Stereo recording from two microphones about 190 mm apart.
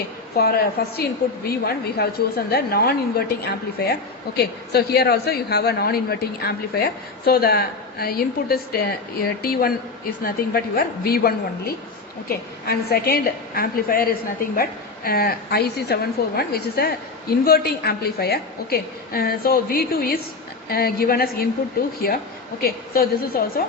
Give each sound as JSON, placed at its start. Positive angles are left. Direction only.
{"t": 0.3, "sound": "a woman's voice", "side_deg": 55}